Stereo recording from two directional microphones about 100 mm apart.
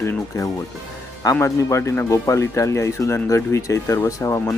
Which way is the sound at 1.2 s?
30° left (ahead or behind).